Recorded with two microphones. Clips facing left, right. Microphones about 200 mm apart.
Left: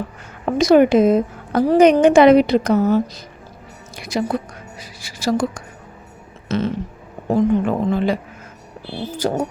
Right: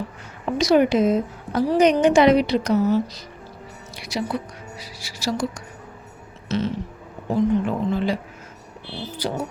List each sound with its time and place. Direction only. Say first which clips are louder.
0.4 s a woman's voice: left 5 dB; 50° left (ahead or behind)